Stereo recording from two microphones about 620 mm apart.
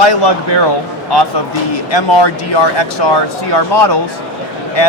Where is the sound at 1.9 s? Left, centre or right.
Left.